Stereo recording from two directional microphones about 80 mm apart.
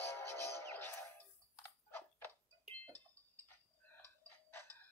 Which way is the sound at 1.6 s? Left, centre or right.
Left.